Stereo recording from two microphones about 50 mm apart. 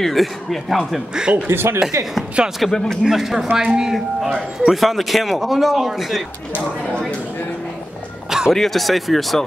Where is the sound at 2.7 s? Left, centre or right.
Centre.